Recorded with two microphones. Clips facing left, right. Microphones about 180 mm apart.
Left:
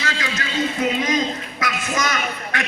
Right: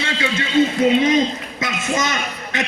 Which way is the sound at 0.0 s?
25° right (ahead or behind).